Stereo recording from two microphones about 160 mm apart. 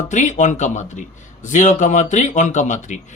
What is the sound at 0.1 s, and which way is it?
A man's voice, 50° left (ahead or behind).